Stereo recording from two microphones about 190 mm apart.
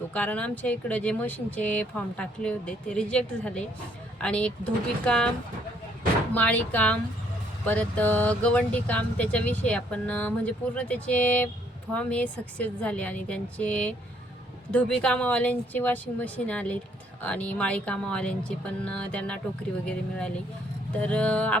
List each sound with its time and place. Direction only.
0.1 s speech: 5° left (ahead or behind)
6.3 s speech: 10° left (ahead or behind)